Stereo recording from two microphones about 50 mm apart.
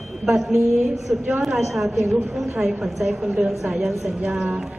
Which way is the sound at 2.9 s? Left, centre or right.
Centre.